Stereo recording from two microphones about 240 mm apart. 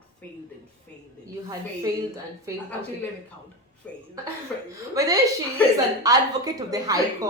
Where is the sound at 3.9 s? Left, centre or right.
Centre.